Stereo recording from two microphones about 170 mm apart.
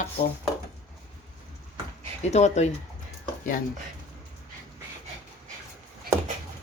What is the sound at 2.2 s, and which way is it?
Speech, 40° left (ahead or behind).